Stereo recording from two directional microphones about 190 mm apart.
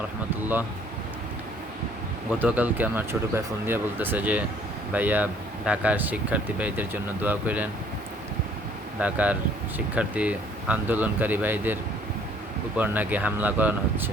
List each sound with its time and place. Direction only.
2.4 s speech: 10° right (ahead or behind)
9.0 s speech: 5° right (ahead or behind)